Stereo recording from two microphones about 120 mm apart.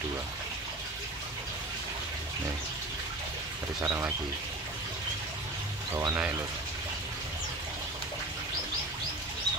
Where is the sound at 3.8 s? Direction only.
25° right (ahead or behind).